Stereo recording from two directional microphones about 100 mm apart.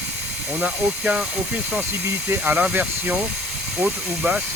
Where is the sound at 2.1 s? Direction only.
25° right (ahead or behind).